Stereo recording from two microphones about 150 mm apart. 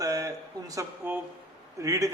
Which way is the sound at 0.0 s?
20° right (ahead or behind).